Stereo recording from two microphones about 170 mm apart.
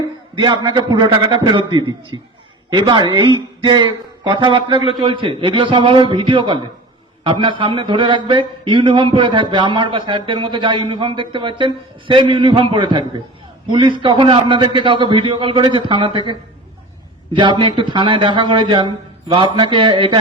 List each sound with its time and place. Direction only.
0.4 s speech: 30° right (ahead or behind)